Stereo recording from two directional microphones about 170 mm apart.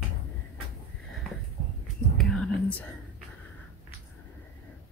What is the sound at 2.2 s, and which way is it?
Whispering, 5° left (ahead or behind).